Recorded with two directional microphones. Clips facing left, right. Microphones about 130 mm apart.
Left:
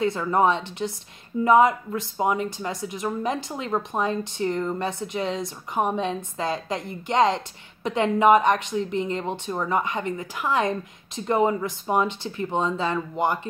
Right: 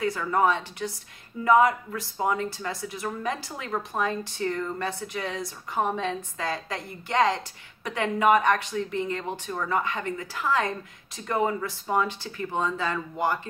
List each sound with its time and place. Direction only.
0.0 s speech: 25° left (ahead or behind)